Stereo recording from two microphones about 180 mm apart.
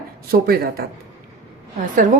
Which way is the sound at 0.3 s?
55° right (ahead or behind).